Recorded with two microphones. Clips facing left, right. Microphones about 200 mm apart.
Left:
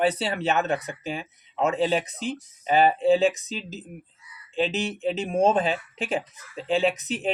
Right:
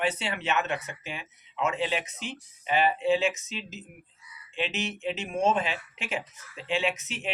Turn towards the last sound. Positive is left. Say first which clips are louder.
# left 6 dB
turn(degrees=35)  # may be behind; listen again after turning